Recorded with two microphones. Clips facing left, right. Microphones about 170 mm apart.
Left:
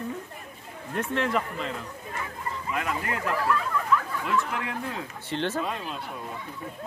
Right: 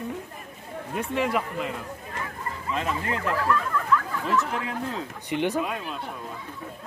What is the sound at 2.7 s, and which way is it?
Speech, 25° right (ahead or behind).